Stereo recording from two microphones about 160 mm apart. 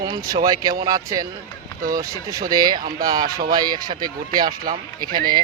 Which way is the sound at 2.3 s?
25° right (ahead or behind).